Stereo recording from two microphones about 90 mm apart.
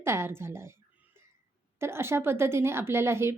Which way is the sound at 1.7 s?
30° right (ahead or behind).